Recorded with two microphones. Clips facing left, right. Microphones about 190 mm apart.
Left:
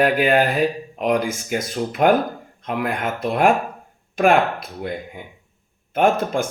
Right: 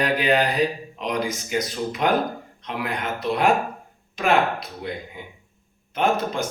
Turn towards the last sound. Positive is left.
turn(degrees=50)  # may be behind; listen again after turning